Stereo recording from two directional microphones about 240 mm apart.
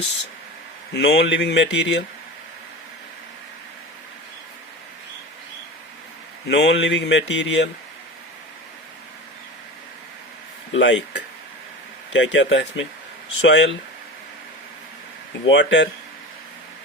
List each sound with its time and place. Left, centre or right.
0.9 s speech: left
6.5 s speech: left
10.7 s speech: left
15.4 s speech: left